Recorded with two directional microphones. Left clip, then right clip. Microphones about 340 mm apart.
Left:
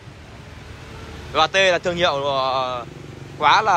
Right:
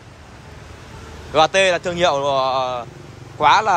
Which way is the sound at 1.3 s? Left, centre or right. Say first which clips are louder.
Right 2 dB; centre.